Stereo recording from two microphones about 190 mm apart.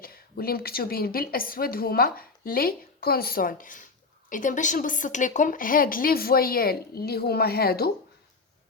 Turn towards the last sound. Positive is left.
turn(degrees=55)  # may be behind; listen again after turning